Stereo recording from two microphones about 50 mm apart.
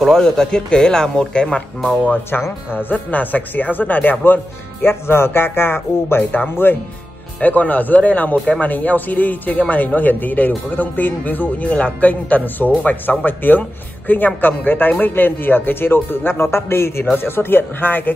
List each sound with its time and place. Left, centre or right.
0.0 s speech: centre
2.7 s speech: left
4.8 s speech: left
6.3 s speech: left
7.3 s speech: left
17.0 s speech: left